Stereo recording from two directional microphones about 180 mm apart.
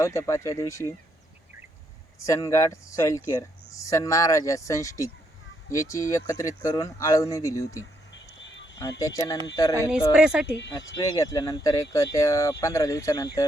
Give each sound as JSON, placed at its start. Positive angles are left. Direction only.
{"t": 0.0, "sound": "speech", "side_deg": 15}
{"t": 2.1, "sound": "speech", "side_deg": 15}
{"t": 10.1, "sound": "speech", "side_deg": -5}
{"t": 10.7, "sound": "speech", "side_deg": 20}